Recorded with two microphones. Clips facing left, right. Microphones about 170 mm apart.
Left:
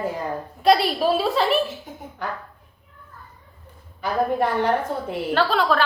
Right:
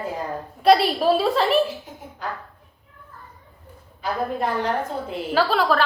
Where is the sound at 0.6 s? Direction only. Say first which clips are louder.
Right 2 dB; centre (ahead or behind).